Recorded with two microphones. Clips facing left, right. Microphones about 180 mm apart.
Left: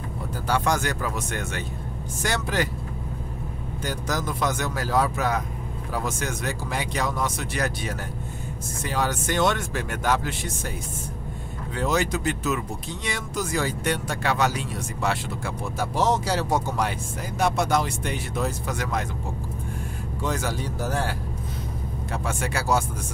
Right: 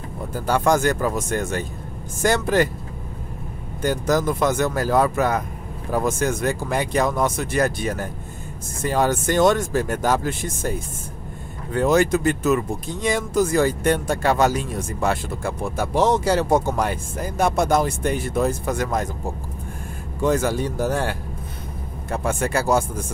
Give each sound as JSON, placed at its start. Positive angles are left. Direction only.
{"t": 0.5, "sound": "speech", "side_deg": -50}
{"t": 3.8, "sound": "speech", "side_deg": -50}
{"t": 20.2, "sound": "speech", "side_deg": -50}
{"t": 22.1, "sound": "speech", "side_deg": -50}